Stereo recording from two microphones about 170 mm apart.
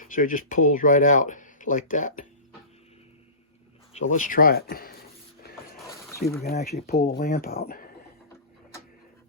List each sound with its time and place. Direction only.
0.0 s speech: 50° left (ahead or behind)
3.9 s speech: 45° left (ahead or behind)
5.9 s a sound: 20° left (ahead or behind)
6.4 s speech: 65° left (ahead or behind)